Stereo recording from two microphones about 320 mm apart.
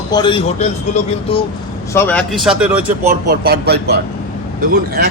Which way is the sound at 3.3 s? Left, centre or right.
Right.